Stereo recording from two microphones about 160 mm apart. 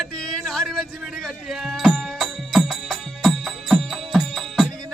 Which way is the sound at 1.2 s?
Centre (ahead or behind).